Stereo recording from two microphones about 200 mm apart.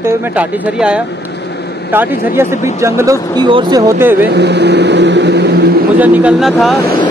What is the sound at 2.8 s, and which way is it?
Speech, 15° right (ahead or behind).